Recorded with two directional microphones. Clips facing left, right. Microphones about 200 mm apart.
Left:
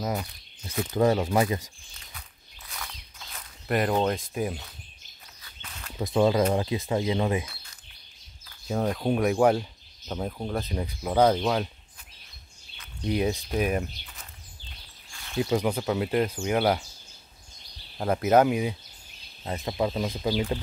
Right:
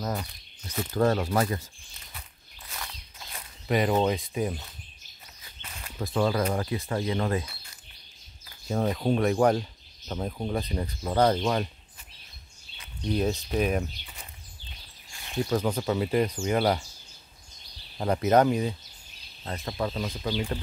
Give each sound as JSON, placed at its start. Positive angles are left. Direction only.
{"t": 0.0, "sound": "speech", "side_deg": 5}
{"t": 0.9, "sound": "speech", "side_deg": 15}
{"t": 2.7, "sound": "walk", "side_deg": 0}
{"t": 5.9, "sound": "speech", "side_deg": 20}
{"t": 8.6, "sound": "speech", "side_deg": 0}
{"t": 13.0, "sound": "speech", "side_deg": 10}
{"t": 15.5, "sound": "speech", "side_deg": 10}
{"t": 17.9, "sound": "speech", "side_deg": 5}